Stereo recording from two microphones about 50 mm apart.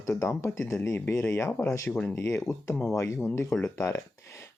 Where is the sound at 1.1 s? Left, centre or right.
Left.